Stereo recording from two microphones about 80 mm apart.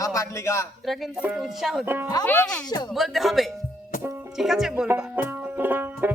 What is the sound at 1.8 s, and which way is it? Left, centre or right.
Speech, right.